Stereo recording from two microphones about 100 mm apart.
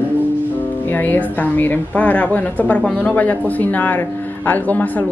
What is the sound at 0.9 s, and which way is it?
Speech, 20° left (ahead or behind).